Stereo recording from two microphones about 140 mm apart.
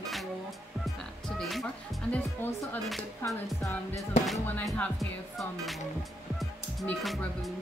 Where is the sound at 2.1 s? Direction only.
15° left (ahead or behind).